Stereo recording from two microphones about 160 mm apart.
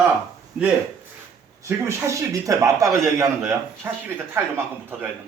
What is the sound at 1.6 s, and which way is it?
A man's voice, 15° right (ahead or behind).